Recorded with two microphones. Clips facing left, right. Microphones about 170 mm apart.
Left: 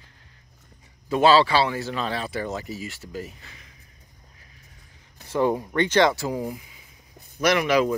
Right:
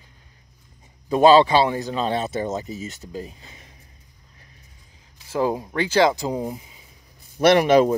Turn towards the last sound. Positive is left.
turn(degrees=-35)  # may be behind; listen again after turning